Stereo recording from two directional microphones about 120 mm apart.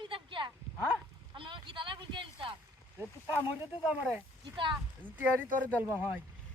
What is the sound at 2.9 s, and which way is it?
Speech, 15° right (ahead or behind).